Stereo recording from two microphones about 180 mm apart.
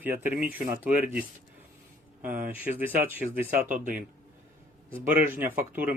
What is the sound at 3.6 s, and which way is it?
Speech, 45° right (ahead or behind).